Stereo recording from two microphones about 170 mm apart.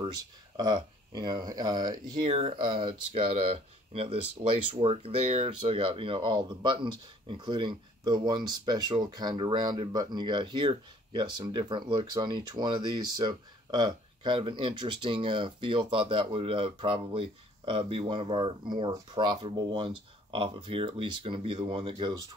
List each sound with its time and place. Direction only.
0.6 s speech: 25° right (ahead or behind)